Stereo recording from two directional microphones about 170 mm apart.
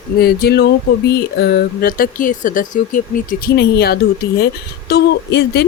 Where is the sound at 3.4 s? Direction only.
65° left (ahead or behind).